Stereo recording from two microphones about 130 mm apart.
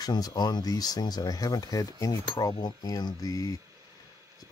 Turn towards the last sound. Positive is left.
turn(degrees=30)  # may be behind; listen again after turning